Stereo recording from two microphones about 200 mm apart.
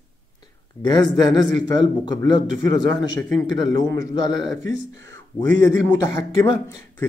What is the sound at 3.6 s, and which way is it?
Speech, 20° left (ahead or behind).